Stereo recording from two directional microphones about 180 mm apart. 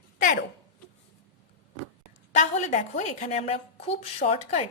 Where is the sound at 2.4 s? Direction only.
40° left (ahead or behind).